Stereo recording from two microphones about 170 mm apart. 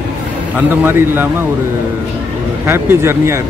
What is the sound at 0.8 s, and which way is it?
Speech, 10° right (ahead or behind).